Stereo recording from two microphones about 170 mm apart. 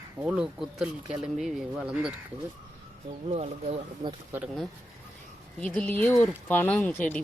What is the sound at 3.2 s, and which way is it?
Speech, 40° right (ahead or behind).